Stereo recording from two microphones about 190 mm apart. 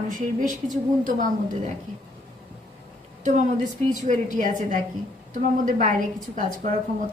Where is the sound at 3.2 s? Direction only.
40° right (ahead or behind).